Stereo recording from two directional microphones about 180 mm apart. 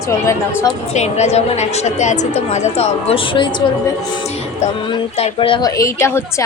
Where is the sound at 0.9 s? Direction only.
40° left (ahead or behind).